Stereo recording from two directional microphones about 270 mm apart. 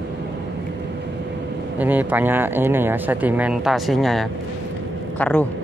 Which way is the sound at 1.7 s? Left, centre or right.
Centre.